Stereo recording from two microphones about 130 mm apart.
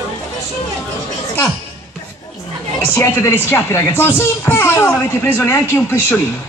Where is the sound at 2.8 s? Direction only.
20° left (ahead or behind).